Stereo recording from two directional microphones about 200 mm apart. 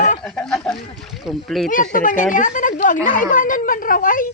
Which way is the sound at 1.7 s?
45° left (ahead or behind).